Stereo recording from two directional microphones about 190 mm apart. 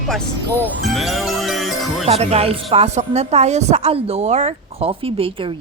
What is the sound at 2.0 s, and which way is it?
A woman's voice, 35° right (ahead or behind).